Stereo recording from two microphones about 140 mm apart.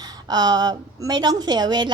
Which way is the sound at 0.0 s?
30° right (ahead or behind).